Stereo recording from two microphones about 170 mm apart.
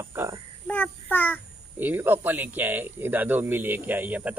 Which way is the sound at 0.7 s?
10° left (ahead or behind).